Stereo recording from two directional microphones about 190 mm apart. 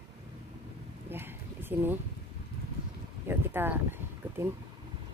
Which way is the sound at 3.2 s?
10° right (ahead or behind).